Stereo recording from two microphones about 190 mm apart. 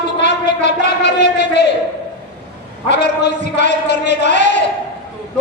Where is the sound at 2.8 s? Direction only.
40° right (ahead or behind).